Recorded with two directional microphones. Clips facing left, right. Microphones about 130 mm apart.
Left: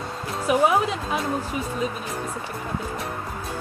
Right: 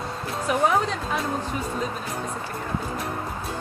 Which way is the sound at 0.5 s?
10° left (ahead or behind).